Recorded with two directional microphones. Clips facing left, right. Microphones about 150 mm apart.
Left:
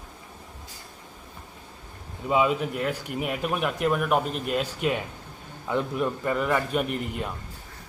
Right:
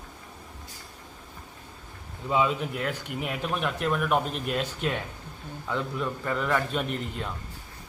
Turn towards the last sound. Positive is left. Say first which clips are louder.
# left 2 dB
turn(degrees=10)  # may be behind; listen again after turning